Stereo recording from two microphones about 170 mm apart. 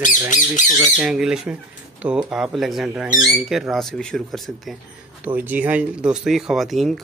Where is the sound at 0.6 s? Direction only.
45° left (ahead or behind).